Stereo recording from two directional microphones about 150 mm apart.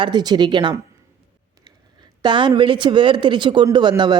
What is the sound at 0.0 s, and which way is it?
Speech, 30° right (ahead or behind).